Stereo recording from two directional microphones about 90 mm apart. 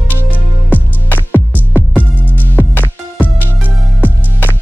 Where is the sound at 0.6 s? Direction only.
20° left (ahead or behind).